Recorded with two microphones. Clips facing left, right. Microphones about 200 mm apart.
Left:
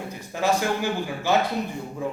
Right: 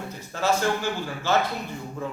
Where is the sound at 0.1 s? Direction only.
15° left (ahead or behind).